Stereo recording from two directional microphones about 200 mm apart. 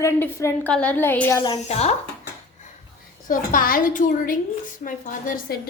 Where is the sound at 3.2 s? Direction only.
45° left (ahead or behind).